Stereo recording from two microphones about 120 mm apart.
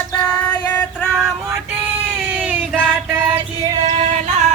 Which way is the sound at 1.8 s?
10° right (ahead or behind).